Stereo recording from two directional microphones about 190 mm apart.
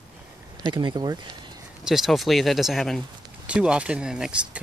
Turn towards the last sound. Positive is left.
turn(degrees=-5)  # may be behind; listen again after turning